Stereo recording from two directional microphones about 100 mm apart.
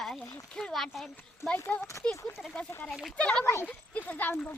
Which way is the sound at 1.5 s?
20° left (ahead or behind).